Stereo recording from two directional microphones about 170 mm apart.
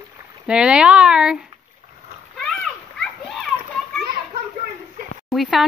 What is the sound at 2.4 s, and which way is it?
Children playing, 5° left (ahead or behind).